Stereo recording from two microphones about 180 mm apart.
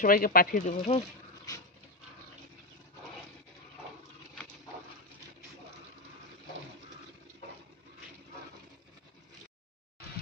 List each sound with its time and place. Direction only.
0.0 s speech: 50° left (ahead or behind)
1.5 s dog: 20° left (ahead or behind)